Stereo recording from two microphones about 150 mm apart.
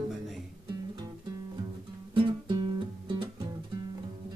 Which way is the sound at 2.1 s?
30° right (ahead or behind).